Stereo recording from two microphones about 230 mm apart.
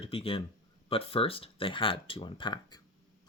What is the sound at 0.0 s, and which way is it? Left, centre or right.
Speech, left.